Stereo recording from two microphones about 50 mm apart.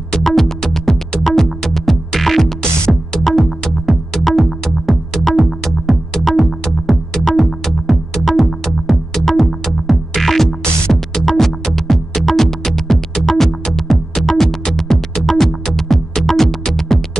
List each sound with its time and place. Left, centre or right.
0.2 s music: centre